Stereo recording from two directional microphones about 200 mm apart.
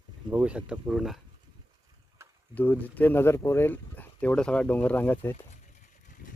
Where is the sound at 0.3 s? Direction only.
5° right (ahead or behind).